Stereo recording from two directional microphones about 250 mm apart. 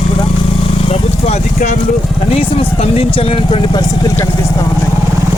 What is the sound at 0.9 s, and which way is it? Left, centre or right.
Speech, left.